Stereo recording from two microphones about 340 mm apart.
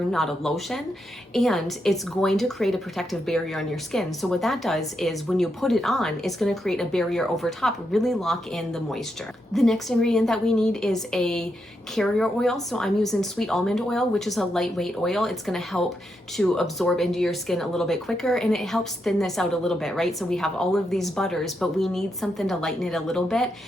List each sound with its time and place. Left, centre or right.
0.1 s a woman's voice: centre